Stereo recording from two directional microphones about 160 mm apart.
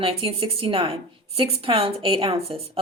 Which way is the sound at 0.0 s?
35° right (ahead or behind).